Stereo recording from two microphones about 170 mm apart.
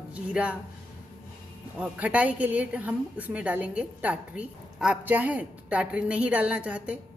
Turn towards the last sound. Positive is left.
turn(degrees=-5)  # may be behind; listen again after turning